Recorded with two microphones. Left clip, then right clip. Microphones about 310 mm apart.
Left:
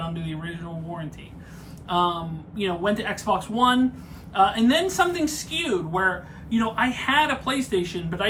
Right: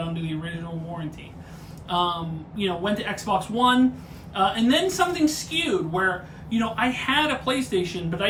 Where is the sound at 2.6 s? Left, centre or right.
Centre.